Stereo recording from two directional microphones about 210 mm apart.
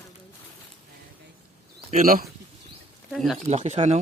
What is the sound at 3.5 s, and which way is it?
Speech, 35° right (ahead or behind).